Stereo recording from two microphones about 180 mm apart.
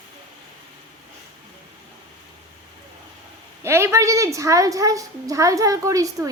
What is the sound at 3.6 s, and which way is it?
A woman's voice, 15° right (ahead or behind).